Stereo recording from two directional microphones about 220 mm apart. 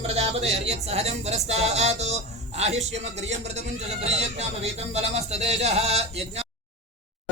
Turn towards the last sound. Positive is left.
turn(degrees=-30)  # may be behind; listen again after turning